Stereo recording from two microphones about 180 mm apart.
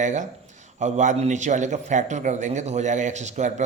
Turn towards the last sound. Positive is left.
turn(degrees=-40)  # may be behind; listen again after turning